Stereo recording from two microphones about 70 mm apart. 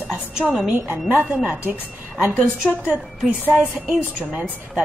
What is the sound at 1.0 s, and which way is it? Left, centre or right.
Speech, centre.